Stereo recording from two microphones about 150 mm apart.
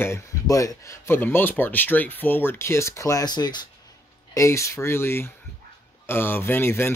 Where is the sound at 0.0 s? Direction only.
20° left (ahead or behind).